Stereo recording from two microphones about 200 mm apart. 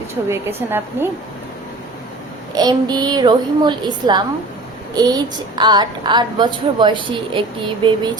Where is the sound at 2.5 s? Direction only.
20° right (ahead or behind).